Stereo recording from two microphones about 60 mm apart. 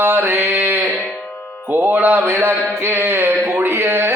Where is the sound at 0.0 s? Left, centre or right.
Right.